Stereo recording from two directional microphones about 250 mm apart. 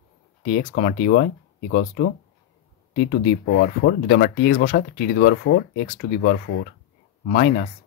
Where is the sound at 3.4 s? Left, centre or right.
Left.